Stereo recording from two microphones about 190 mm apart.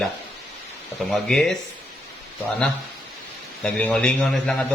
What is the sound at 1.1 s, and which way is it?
Speech, centre (ahead or behind).